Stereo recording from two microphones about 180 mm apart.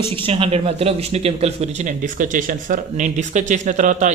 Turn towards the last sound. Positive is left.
turn(degrees=-45)  # may be behind; listen again after turning